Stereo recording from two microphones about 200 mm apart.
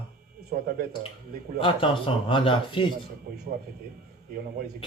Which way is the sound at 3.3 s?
50° right (ahead or behind).